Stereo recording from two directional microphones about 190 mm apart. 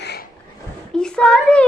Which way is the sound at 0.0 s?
60° left (ahead or behind).